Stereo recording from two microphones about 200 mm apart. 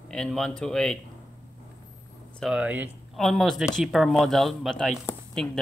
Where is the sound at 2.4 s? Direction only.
5° right (ahead or behind).